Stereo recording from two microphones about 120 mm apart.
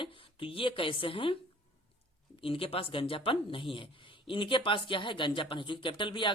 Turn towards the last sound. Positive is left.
turn(degrees=45)  # may be behind; listen again after turning